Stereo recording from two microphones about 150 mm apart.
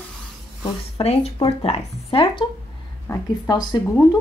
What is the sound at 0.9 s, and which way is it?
Speech, 40° left (ahead or behind).